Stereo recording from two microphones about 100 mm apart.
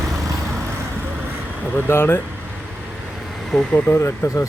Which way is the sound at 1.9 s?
25° left (ahead or behind).